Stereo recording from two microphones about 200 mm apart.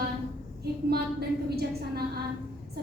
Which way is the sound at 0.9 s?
50° right (ahead or behind).